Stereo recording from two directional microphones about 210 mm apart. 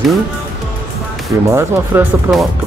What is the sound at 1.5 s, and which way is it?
Speech, 10° right (ahead or behind).